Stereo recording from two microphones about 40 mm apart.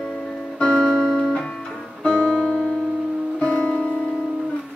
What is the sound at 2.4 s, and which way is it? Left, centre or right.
Music, centre.